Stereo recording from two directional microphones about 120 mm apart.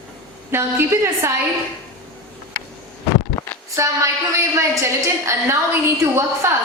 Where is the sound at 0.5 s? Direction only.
20° right (ahead or behind).